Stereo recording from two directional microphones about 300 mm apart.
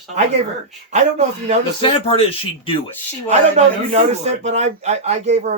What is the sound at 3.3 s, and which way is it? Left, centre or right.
A man's voice, right.